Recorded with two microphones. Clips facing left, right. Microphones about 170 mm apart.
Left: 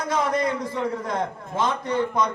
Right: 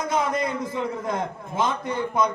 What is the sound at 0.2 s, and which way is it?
A man's voice, 10° right (ahead or behind).